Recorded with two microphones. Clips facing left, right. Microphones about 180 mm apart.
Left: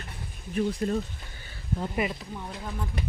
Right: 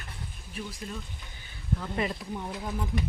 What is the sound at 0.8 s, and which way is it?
Speech, 45° left (ahead or behind).